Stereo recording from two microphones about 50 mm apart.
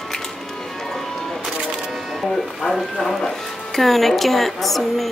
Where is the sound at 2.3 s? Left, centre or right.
Centre.